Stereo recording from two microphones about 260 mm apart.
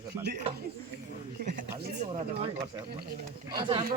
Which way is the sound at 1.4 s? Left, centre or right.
Right.